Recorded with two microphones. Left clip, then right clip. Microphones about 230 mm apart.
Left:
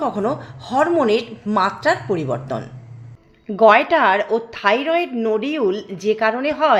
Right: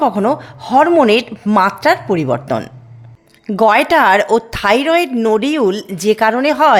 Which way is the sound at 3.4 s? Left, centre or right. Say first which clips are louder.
Right 1 dB; right.